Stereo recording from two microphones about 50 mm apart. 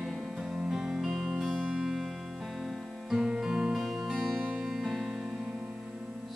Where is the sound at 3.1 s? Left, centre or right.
Centre.